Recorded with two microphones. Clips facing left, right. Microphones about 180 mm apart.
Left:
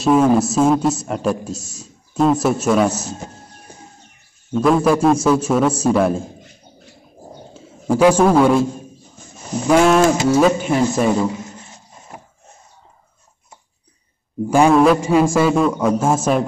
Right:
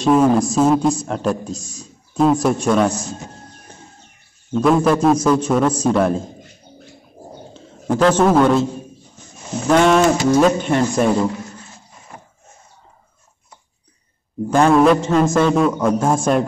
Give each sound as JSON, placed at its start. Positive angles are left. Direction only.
{"t": 0.0, "sound": "a man's voice", "side_deg": 5}
{"t": 4.5, "sound": "a man's voice", "side_deg": 0}
{"t": 7.5, "sound": "a sound", "side_deg": 10}
{"t": 8.3, "sound": "a man's voice", "side_deg": 5}
{"t": 9.7, "sound": "a man's voice", "side_deg": 5}
{"t": 11.3, "sound": "a sound", "side_deg": 20}
{"t": 14.5, "sound": "a man's voice", "side_deg": 10}